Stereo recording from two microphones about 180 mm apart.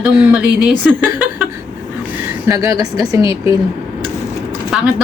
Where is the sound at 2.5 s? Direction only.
20° right (ahead or behind).